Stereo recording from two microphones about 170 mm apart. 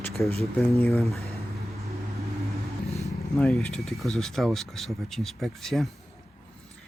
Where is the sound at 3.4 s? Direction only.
5° left (ahead or behind).